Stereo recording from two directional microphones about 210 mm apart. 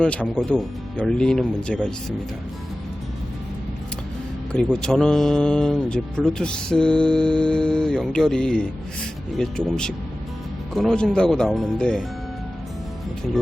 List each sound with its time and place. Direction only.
0.0 s speech: 5° left (ahead or behind)
4.5 s speech: 5° left (ahead or behind)